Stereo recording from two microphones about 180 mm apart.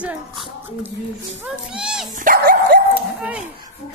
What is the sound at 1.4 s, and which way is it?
Speech, 5° right (ahead or behind).